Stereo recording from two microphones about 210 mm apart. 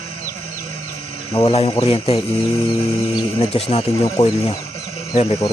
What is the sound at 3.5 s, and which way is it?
Speech, 30° left (ahead or behind).